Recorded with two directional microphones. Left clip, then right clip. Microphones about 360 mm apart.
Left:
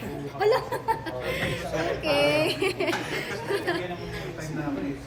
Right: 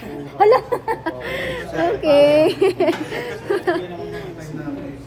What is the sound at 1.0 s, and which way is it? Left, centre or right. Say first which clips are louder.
Chuckle: right 5 dB; right.